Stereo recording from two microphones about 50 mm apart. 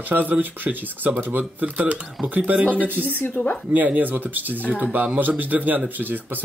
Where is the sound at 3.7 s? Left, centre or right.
Right.